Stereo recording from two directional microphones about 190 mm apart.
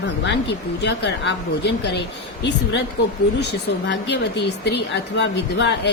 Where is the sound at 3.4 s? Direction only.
65° left (ahead or behind).